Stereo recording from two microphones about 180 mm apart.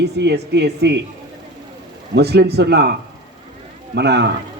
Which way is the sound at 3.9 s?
70° right (ahead or behind).